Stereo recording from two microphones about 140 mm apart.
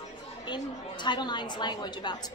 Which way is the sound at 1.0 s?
30° left (ahead or behind).